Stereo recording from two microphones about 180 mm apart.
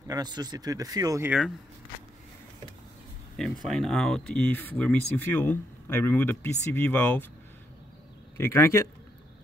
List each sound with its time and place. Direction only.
0.1 s speech: 20° right (ahead or behind)
3.6 s speech: centre (ahead or behind)
8.4 s speech: 15° left (ahead or behind)